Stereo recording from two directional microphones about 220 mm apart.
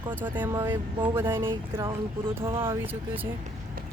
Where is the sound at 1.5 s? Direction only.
20° right (ahead or behind).